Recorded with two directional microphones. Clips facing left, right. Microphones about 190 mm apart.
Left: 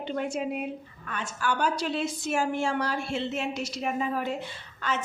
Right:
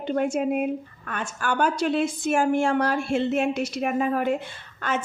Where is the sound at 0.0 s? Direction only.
50° right (ahead or behind).